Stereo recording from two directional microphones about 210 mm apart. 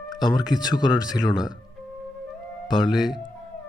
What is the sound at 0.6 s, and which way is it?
Speech, 20° left (ahead or behind).